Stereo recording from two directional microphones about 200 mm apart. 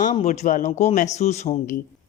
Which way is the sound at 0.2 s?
40° left (ahead or behind).